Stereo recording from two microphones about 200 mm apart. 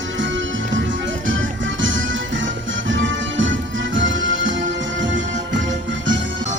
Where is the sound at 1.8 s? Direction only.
70° right (ahead or behind).